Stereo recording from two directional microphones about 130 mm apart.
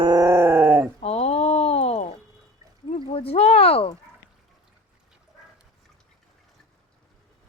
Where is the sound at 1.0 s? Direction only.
50° left (ahead or behind).